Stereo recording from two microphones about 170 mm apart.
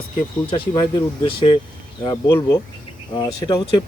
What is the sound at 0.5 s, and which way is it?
Speech, 30° left (ahead or behind).